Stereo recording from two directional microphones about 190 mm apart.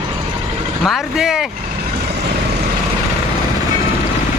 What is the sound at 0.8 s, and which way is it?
Speech, centre (ahead or behind).